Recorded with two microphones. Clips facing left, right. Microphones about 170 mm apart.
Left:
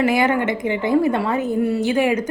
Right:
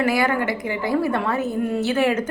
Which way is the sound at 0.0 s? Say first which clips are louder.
Left 3 dB; 20° left (ahead or behind).